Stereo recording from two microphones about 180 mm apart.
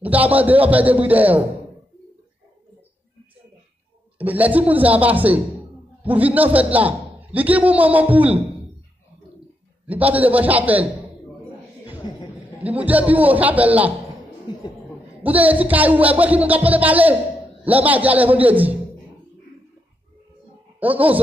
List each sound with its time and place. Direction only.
0.0 s a man's voice: 10° right (ahead or behind)
4.2 s a man's voice: 10° right (ahead or behind)
9.8 s a man's voice: 10° right (ahead or behind)
12.0 s a sound: 25° left (ahead or behind)
12.5 s a man's voice: 10° right (ahead or behind)
14.5 s a sound: 25° left (ahead or behind)
15.2 s a man's voice: 10° right (ahead or behind)
20.8 s a man's voice: 10° right (ahead or behind)